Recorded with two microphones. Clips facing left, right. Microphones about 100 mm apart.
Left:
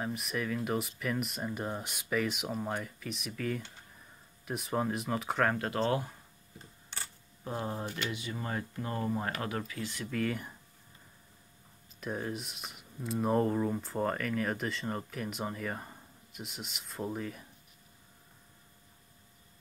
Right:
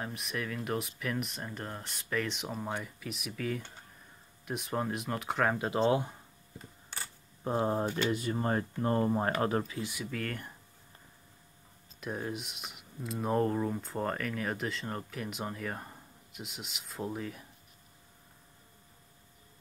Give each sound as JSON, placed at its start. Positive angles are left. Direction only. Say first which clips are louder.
{"t": 0.0, "sound": "speech", "louder": "left 2 dB", "side_deg": 0}
{"t": 5.6, "sound": "speech", "louder": "right 3 dB", "side_deg": -20}
{"t": 7.4, "sound": "speech", "louder": "right 6 dB", "side_deg": -35}
{"t": 9.8, "sound": "speech", "louder": "right 1 dB", "side_deg": -15}
{"t": 10.0, "sound": "speech", "louder": "left 4 dB", "side_deg": 0}
{"t": 12.0, "sound": "speech", "louder": "even", "side_deg": 0}